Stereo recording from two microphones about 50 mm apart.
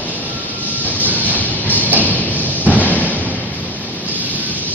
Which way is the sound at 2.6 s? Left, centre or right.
Right.